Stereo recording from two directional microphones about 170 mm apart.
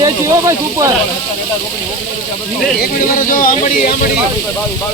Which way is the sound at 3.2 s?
50° left (ahead or behind).